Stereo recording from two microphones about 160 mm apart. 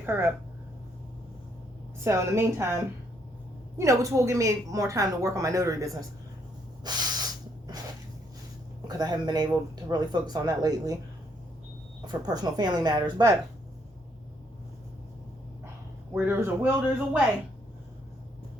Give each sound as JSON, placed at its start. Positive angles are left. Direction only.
{"t": 0.0, "sound": "speech", "side_deg": -15}
{"t": 2.0, "sound": "a woman's voice", "side_deg": -15}
{"t": 6.8, "sound": "spray", "side_deg": -25}
{"t": 8.9, "sound": "a woman's voice", "side_deg": -25}
{"t": 12.0, "sound": "a woman's voice", "side_deg": -25}
{"t": 16.1, "sound": "speech", "side_deg": -10}